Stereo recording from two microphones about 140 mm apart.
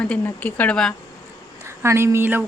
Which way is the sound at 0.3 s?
10° left (ahead or behind).